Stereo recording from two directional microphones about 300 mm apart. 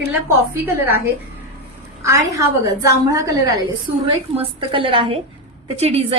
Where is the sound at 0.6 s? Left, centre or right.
Centre.